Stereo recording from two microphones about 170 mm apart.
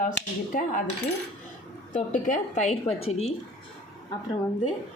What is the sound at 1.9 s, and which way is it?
A woman's voice, 50° left (ahead or behind).